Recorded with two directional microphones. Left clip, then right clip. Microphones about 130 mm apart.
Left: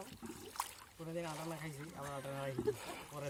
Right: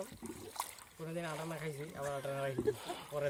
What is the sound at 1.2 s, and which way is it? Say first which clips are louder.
Speech: right 2 dB; 45° left (ahead or behind).